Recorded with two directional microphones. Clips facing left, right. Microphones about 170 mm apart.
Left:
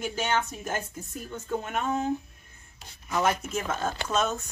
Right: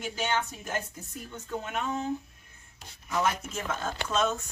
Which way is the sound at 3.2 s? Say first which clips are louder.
Left 5 dB; 50° left (ahead or behind).